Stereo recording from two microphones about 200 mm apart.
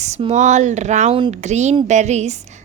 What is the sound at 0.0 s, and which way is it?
A woman's voice, 30° right (ahead or behind).